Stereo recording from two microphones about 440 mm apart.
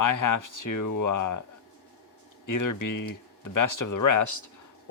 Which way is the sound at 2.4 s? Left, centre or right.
Left.